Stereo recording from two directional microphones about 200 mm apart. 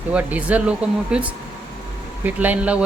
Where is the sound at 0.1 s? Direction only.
5° right (ahead or behind).